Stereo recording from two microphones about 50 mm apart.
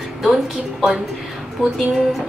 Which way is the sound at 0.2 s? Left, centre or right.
Centre.